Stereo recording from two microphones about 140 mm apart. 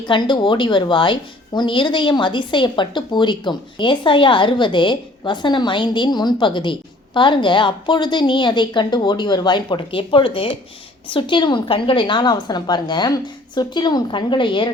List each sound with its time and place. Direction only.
0.0 s a woman's voice: 35° left (ahead or behind)